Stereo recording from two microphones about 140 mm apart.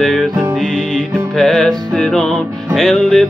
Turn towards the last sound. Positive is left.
turn(degrees=5)  # may be behind; listen again after turning